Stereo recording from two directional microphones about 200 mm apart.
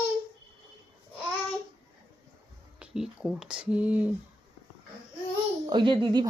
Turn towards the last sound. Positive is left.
turn(degrees=-25)  # may be behind; listen again after turning